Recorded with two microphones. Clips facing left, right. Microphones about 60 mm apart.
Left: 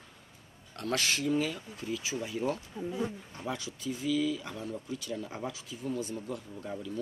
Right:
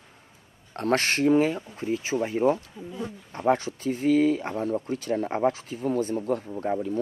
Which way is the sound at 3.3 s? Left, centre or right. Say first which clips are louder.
Right 14 dB; right.